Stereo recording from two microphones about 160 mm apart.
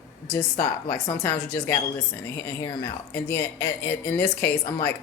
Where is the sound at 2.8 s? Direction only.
15° left (ahead or behind).